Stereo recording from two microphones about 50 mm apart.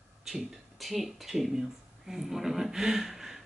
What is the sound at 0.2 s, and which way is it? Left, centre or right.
Speech, centre.